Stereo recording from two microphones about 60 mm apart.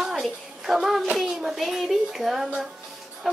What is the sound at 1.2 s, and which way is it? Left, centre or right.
Speech, centre.